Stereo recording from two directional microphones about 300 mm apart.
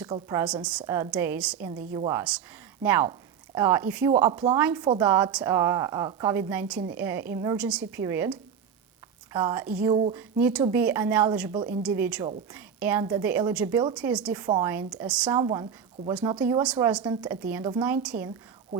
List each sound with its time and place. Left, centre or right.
0.0 s a woman's voice: centre
9.9 s a woman's voice: centre
10.2 s a woman's voice: centre
15.4 s a woman's voice: centre